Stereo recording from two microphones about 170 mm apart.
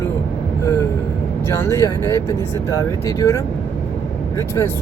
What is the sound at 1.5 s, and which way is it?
Speech, 15° left (ahead or behind).